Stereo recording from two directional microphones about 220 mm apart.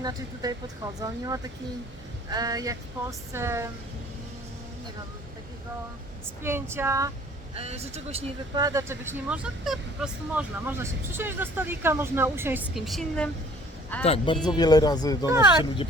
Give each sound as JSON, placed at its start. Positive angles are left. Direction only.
{"t": 0.0, "sound": "speech", "side_deg": -15}
{"t": 6.4, "sound": "speech", "side_deg": -10}
{"t": 7.5, "sound": "a man's voice", "side_deg": -30}
{"t": 8.5, "sound": "speech", "side_deg": -15}
{"t": 14.0, "sound": "speech", "side_deg": 25}